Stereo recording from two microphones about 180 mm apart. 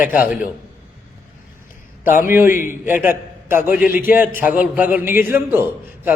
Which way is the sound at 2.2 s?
10° right (ahead or behind).